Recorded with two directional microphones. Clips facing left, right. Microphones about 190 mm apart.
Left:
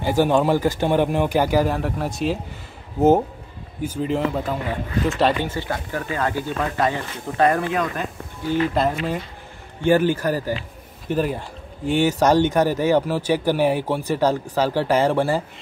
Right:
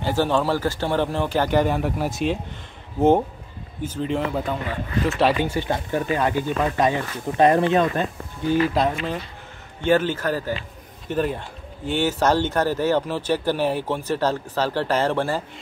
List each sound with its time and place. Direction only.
0.0 s speech: 15° left (ahead or behind)
5.4 s speech: 15° right (ahead or behind)
8.7 s speech: 5° left (ahead or behind)